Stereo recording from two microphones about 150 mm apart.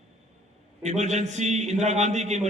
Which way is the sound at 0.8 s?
50° right (ahead or behind).